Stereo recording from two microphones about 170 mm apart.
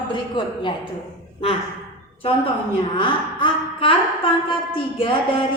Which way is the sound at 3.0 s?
30° left (ahead or behind).